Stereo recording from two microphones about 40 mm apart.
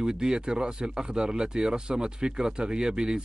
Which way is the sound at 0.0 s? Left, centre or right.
Centre.